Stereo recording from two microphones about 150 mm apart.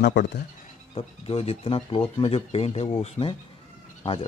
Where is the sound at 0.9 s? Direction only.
40° left (ahead or behind).